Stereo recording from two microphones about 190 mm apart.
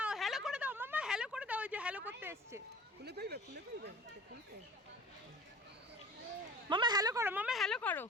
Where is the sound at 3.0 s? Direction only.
60° right (ahead or behind).